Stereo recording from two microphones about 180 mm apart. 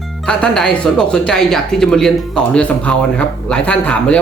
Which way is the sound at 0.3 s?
5° left (ahead or behind).